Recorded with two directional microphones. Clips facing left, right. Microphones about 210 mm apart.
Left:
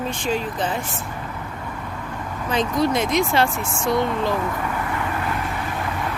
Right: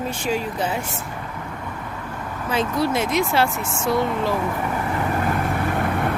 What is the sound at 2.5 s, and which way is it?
Speech, 5° right (ahead or behind).